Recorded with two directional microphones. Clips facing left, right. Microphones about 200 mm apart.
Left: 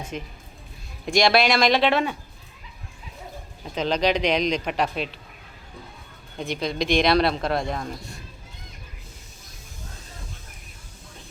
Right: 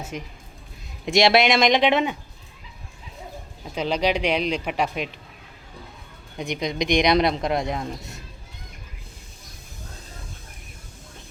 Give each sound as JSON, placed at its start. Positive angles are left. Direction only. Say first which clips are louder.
{"t": 0.1, "sound": "speech", "louder": "left 1 dB", "side_deg": -10}
{"t": 1.0, "sound": "speech", "louder": "right 2 dB", "side_deg": -25}
{"t": 3.6, "sound": "speech", "louder": "even", "side_deg": -10}
{"t": 6.3, "sound": "speech", "louder": "even", "side_deg": -15}